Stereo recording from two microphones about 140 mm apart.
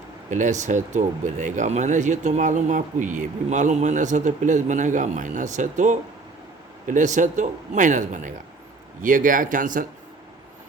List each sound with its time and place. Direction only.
0.3 s speech: 65° right (ahead or behind)